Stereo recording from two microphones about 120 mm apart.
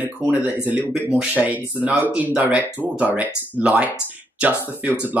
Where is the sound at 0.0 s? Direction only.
15° right (ahead or behind).